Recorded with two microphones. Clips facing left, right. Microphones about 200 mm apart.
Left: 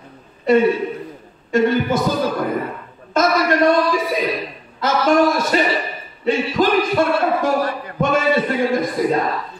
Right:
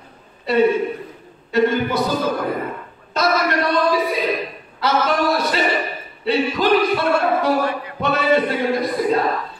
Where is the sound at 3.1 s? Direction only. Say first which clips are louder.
Left 3 dB; 45° left (ahead or behind).